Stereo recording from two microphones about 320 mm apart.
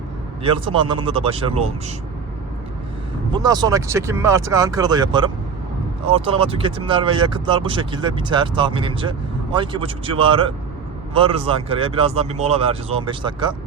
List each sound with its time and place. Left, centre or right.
0.4 s speech: centre
3.3 s speech: centre